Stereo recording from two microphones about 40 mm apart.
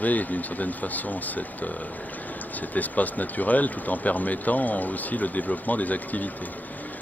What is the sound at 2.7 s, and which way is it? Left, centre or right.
Speech, left.